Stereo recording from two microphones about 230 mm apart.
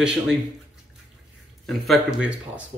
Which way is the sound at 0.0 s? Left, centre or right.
Centre.